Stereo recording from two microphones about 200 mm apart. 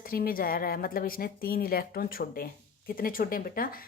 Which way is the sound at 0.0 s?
45° left (ahead or behind).